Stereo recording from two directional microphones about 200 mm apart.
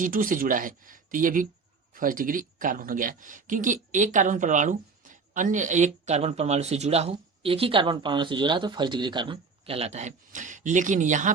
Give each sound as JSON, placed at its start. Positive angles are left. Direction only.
{"t": 0.0, "sound": "speech", "side_deg": -45}